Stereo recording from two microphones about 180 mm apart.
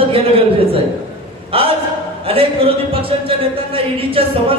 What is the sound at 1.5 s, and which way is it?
A man's voice, 30° right (ahead or behind).